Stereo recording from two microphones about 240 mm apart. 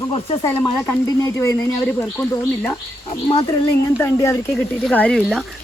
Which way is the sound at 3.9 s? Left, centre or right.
Centre.